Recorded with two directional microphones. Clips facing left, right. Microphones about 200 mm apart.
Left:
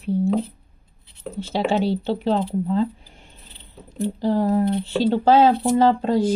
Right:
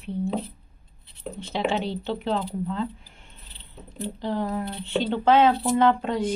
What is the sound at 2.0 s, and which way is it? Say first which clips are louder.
Speech: left 5 dB; 30° left (ahead or behind).